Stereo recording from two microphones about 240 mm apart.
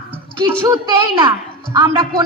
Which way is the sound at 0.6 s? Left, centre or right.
Centre.